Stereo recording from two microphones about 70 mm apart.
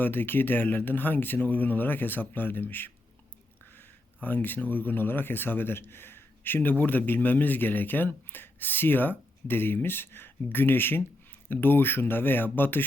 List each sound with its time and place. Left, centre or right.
0.0 s speech: left